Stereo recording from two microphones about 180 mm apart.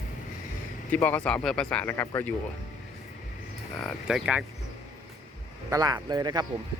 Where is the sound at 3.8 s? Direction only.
Centre (ahead or behind).